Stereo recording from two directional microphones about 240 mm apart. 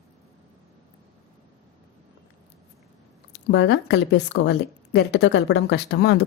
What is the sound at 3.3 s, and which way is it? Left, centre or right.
Speech, left.